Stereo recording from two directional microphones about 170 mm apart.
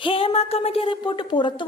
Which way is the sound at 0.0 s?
30° left (ahead or behind).